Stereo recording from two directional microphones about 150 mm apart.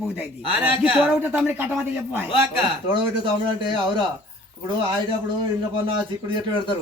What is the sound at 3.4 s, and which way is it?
Speech, 30° right (ahead or behind).